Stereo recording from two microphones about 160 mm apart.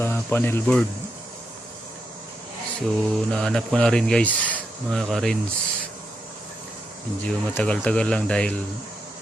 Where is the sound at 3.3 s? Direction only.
5° left (ahead or behind).